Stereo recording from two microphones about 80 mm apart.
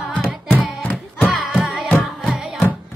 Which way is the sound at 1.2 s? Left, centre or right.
Centre.